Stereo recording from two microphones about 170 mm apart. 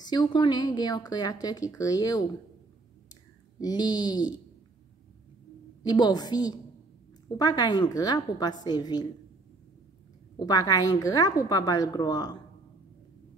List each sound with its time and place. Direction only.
0.0 s speech: 25° left (ahead or behind)
3.5 s speech: 25° left (ahead or behind)
5.9 s speech: 25° left (ahead or behind)
10.4 s speech: 25° left (ahead or behind)